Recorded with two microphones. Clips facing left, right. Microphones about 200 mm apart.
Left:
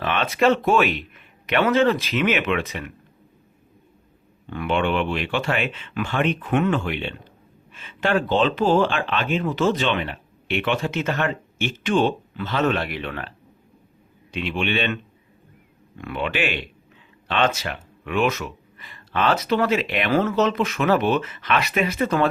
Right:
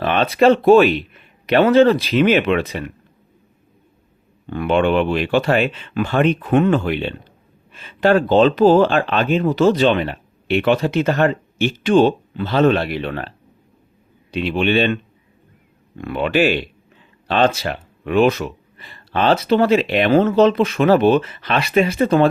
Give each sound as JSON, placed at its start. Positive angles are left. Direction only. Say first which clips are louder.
{"t": 0.0, "sound": "speech", "louder": "right 6 dB", "side_deg": -35}
{"t": 4.4, "sound": "speech", "louder": "right 6 dB", "side_deg": -35}
{"t": 16.0, "sound": "speech", "louder": "right 8 dB", "side_deg": -35}